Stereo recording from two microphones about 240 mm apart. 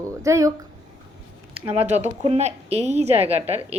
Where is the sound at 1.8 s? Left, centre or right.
Right.